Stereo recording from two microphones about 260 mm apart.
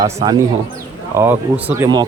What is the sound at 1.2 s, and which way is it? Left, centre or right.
Speech, centre.